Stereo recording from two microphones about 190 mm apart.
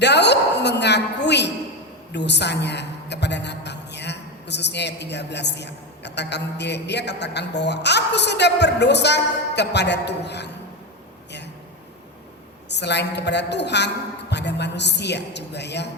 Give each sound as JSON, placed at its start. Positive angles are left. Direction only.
{"t": 0.0, "sound": "music", "side_deg": 65}
{"t": 2.1, "sound": "a woman's voice", "side_deg": 65}
{"t": 12.6, "sound": "a woman's voice", "side_deg": 65}